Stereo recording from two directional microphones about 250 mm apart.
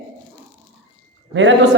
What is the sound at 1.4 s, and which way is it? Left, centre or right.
Speech, right.